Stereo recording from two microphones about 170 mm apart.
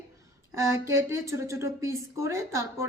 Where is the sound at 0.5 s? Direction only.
15° right (ahead or behind).